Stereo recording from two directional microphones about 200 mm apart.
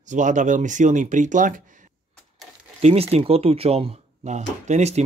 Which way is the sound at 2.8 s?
30° right (ahead or behind).